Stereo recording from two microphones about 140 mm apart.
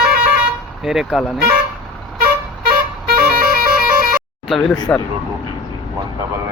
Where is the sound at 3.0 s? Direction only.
90° right.